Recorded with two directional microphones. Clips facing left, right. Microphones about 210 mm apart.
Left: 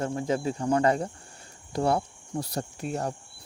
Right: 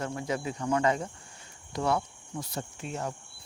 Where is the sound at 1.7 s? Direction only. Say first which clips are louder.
Left 3 dB; 30° left (ahead or behind).